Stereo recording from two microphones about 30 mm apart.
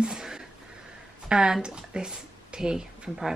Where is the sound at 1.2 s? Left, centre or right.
Right.